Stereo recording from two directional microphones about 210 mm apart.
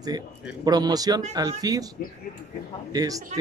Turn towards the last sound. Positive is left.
turn(degrees=-20)  # may be behind; listen again after turning